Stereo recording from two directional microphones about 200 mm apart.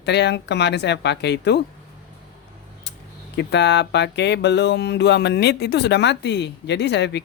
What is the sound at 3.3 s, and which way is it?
Speech, 60° left (ahead or behind).